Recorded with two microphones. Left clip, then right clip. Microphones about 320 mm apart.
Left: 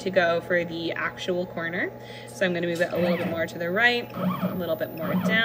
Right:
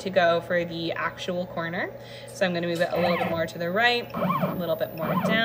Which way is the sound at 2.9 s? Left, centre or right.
Right.